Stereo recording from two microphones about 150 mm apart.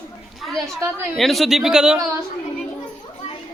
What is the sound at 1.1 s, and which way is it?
Speech, centre (ahead or behind).